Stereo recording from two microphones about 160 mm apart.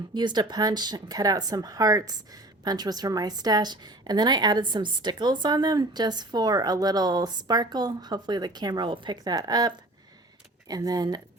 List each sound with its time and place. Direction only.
0.1 s speech: 30° right (ahead or behind)